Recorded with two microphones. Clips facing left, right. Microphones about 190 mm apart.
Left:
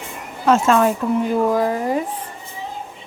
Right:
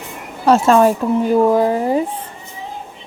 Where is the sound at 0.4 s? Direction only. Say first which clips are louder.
Right 4 dB; 35° right (ahead or behind).